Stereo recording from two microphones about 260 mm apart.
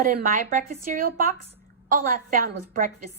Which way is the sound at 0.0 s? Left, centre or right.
Right.